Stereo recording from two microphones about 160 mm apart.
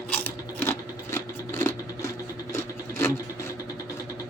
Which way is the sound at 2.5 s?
20° left (ahead or behind).